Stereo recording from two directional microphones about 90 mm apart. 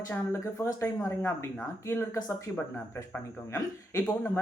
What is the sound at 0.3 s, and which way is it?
Speech, 30° left (ahead or behind).